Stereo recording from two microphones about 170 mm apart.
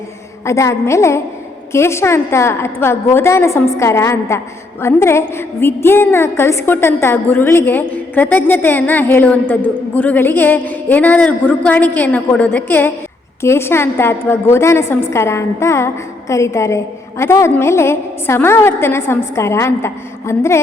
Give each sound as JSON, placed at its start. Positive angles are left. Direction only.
{"t": 0.4, "sound": "a woman's voice", "side_deg": 15}